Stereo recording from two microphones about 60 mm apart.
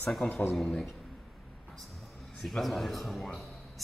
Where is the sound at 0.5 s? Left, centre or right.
Centre.